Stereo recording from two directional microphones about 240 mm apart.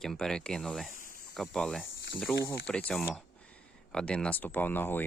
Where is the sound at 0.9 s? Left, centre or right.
Left.